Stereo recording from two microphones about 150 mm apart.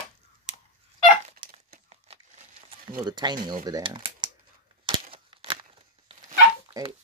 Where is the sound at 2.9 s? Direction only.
30° right (ahead or behind).